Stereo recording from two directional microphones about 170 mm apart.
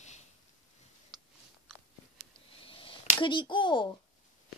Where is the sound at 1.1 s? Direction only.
Centre (ahead or behind).